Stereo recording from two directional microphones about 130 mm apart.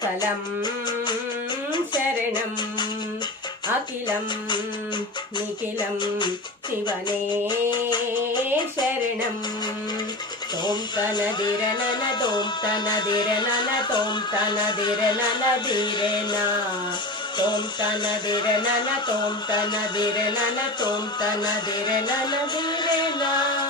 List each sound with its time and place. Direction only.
0.2 s music: 35° left (ahead or behind)
6.0 s speech: 35° left (ahead or behind)
10.6 s speech: 35° left (ahead or behind)